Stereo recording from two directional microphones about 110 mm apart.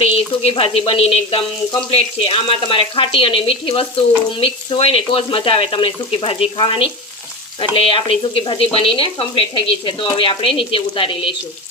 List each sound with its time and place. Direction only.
0.0 s frying: 60° left (ahead or behind)
4.4 s speech: 55° left (ahead or behind)